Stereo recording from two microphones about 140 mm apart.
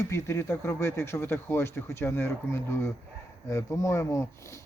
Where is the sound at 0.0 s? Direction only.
20° left (ahead or behind).